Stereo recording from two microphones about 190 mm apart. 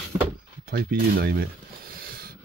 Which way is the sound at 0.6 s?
55° right (ahead or behind).